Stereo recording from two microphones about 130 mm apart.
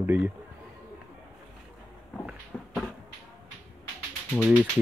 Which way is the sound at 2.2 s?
5° right (ahead or behind).